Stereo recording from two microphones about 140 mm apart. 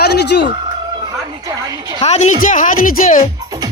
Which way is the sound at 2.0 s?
55° left (ahead or behind).